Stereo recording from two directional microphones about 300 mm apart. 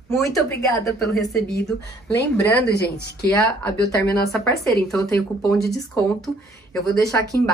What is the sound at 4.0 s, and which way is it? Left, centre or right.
Speech, centre.